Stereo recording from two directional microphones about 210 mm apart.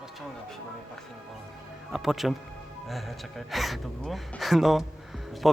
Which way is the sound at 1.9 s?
Centre (ahead or behind).